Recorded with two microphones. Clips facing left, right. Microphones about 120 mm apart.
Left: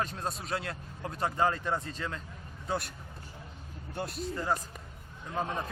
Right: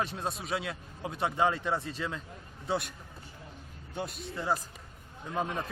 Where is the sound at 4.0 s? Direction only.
Centre (ahead or behind).